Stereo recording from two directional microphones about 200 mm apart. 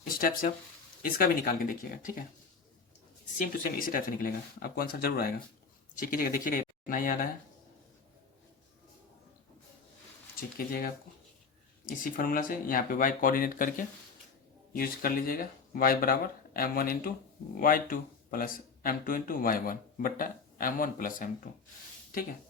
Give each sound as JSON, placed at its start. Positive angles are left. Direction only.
{"t": 0.2, "sound": "speech", "side_deg": 45}
{"t": 3.3, "sound": "speech", "side_deg": 45}
{"t": 10.7, "sound": "speech", "side_deg": 45}